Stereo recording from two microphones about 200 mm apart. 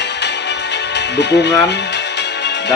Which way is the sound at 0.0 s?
60° left (ahead or behind).